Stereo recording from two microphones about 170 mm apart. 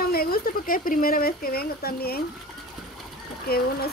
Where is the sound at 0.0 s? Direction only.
60° left (ahead or behind).